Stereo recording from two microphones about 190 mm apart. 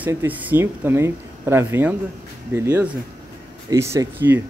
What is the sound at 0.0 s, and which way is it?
A man's voice, 10° right (ahead or behind).